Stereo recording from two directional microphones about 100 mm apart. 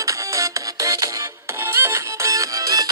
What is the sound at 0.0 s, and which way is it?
Music, 30° right (ahead or behind).